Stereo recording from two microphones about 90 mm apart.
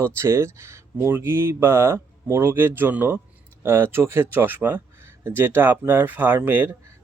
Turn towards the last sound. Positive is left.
turn(degrees=-20)  # may be behind; listen again after turning